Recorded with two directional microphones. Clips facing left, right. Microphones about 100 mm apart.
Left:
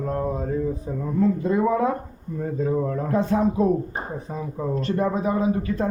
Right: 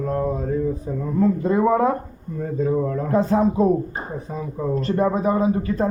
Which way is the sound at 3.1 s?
35° right (ahead or behind).